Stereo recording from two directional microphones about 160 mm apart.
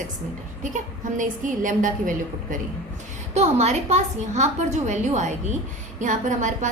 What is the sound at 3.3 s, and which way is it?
A woman's voice, 45° right (ahead or behind).